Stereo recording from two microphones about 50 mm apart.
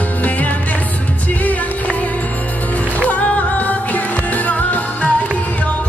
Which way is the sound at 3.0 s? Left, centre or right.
Left.